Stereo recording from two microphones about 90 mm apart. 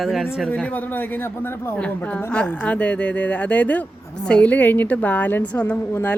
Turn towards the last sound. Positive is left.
turn(degrees=15)  # may be behind; listen again after turning